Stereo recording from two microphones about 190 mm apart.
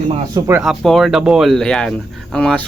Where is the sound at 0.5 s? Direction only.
Centre (ahead or behind).